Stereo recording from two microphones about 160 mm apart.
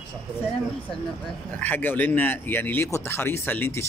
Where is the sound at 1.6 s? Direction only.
10° left (ahead or behind).